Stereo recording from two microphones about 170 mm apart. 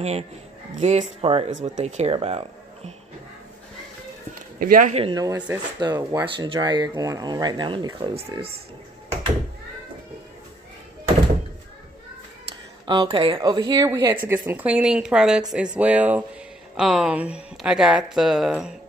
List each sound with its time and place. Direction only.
0.7 s speech: 40° right (ahead or behind)
4.6 s speech: 55° right (ahead or behind)
5.1 s speech: 20° right (ahead or behind); by 8.5 s 35° right (ahead or behind)
12.8 s speech: 25° right (ahead or behind); by 18.8 s 5° right (ahead or behind)